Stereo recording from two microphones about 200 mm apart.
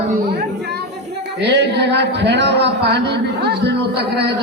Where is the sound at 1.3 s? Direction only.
60° right (ahead or behind).